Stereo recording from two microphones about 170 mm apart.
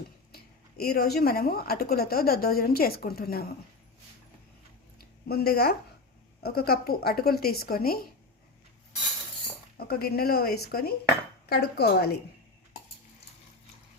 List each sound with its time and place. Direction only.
0.3 s speech: 65° left (ahead or behind)
5.3 s speech: 70° left (ahead or behind)
9.7 s speech: 65° left (ahead or behind)